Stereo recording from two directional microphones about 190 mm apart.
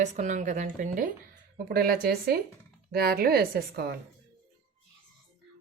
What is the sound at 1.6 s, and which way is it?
A woman's voice, 55° right (ahead or behind).